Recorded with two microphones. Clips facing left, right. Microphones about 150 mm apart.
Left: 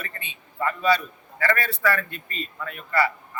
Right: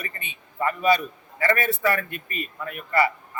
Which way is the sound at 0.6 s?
20° right (ahead or behind).